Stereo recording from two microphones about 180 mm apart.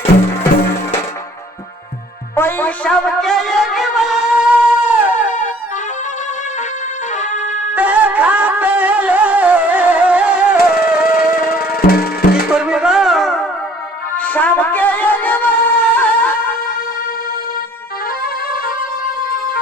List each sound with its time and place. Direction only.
2.3 s music: 10° left (ahead or behind); by 5.1 s 10° right (ahead or behind)
7.2 s music: 40° left (ahead or behind)
7.8 s music: 10° right (ahead or behind)
10.6 s music: 60° left (ahead or behind)
12.5 s music: 5° right (ahead or behind)
18.2 s music: 55° left (ahead or behind)